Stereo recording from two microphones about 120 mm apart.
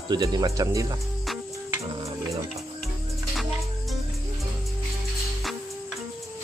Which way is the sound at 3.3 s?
Centre (ahead or behind).